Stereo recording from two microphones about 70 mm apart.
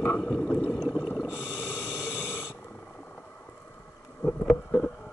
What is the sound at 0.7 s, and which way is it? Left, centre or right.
Snort, centre.